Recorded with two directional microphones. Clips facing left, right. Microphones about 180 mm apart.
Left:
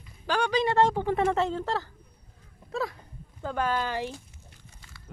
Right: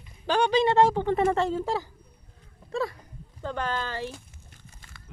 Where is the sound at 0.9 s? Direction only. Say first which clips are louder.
Right 2 dB; 5° left (ahead or behind); by 1.8 s 10° right (ahead or behind).